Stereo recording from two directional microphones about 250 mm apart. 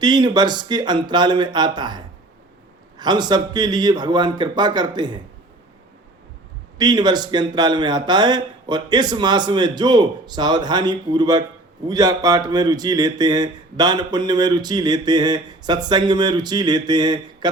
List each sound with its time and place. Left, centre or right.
0.0 s speech: centre
6.7 s speech: centre